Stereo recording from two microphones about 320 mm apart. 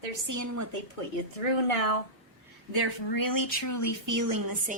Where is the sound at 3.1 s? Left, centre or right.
Left.